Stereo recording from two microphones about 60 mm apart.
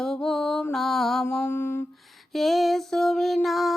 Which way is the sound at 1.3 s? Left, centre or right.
Left.